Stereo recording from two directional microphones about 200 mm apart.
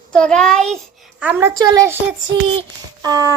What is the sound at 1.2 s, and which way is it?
Speech, 10° right (ahead or behind).